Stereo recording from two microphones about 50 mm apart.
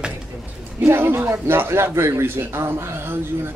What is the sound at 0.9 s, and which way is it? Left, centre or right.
A man's voice, right.